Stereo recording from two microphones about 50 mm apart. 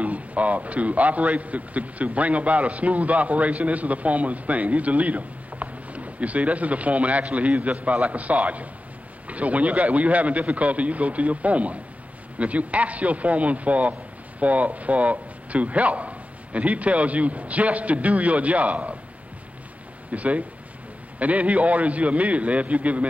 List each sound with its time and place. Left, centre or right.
0.0 s a man's voice: right
20.1 s a man's voice: right